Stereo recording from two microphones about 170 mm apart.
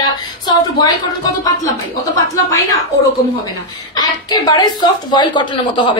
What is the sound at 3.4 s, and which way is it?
A woman's voice, 20° left (ahead or behind).